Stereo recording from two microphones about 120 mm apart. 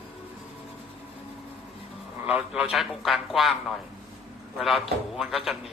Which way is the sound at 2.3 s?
10° right (ahead or behind).